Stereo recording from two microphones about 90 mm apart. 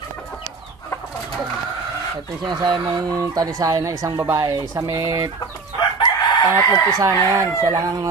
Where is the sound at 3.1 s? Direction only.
40° right (ahead or behind).